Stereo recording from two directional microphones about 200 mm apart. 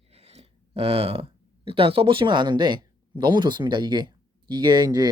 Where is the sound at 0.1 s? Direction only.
30° right (ahead or behind).